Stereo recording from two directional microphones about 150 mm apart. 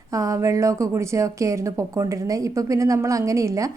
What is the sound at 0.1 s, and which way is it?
Speech, 20° right (ahead or behind).